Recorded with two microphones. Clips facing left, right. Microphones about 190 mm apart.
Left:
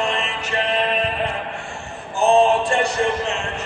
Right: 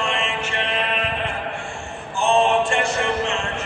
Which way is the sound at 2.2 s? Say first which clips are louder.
Left 3 dB; 35° left (ahead or behind).